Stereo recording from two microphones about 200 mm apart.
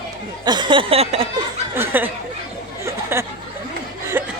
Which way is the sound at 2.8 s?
10° right (ahead or behind).